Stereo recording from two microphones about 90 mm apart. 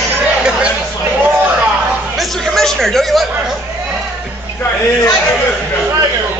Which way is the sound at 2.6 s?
5° left (ahead or behind).